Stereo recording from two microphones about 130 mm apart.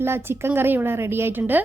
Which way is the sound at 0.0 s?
20° right (ahead or behind).